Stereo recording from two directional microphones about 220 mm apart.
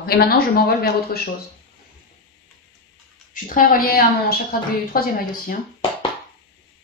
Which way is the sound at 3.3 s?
35° left (ahead or behind).